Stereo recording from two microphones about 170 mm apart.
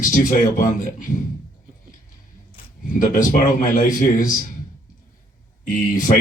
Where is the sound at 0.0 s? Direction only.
50° left (ahead or behind).